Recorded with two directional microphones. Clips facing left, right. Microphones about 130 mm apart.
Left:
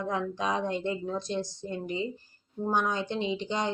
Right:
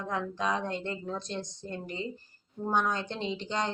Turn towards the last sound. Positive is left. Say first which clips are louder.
# left 2 dB
turn(degrees=10)  # may be behind; listen again after turning